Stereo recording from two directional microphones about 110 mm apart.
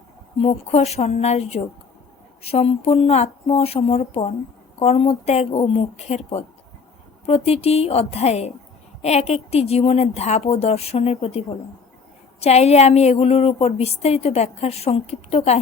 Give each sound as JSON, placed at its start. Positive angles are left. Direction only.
{"t": 0.4, "sound": "a woman's voice", "side_deg": 70}
{"t": 5.5, "sound": "a woman's voice", "side_deg": 60}
{"t": 7.3, "sound": "a woman's voice", "side_deg": 65}